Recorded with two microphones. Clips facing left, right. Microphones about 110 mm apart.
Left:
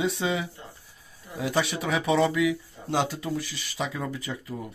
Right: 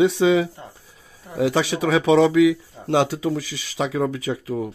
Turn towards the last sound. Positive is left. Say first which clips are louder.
# right 9 dB
turn(degrees=-80)